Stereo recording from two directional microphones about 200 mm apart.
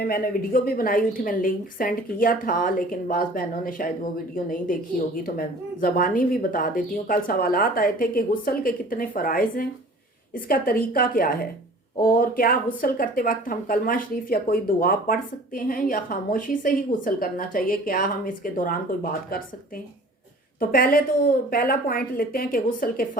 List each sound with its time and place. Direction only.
0.0 s speech: 45° left (ahead or behind)
20.6 s speech: 45° left (ahead or behind)